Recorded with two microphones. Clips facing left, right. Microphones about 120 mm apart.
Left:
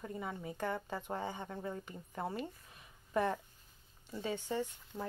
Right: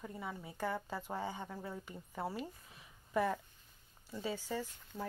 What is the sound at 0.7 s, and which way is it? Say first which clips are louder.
Speech: even; 15° left (ahead or behind).